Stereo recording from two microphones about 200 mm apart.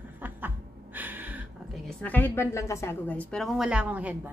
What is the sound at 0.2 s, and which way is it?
Snicker, 10° right (ahead or behind).